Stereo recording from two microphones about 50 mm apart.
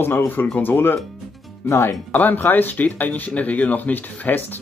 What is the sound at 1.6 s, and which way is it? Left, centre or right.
Speech, left.